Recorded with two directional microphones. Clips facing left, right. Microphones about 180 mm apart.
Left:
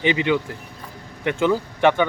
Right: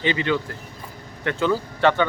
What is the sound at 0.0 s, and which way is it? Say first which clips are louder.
Speech: left 3 dB; 15° left (ahead or behind).